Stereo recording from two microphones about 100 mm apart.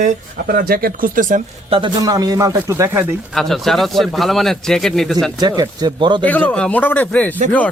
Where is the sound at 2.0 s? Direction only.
35° right (ahead or behind).